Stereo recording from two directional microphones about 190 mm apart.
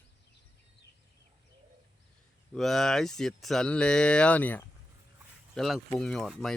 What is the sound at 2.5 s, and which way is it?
Speech, centre (ahead or behind).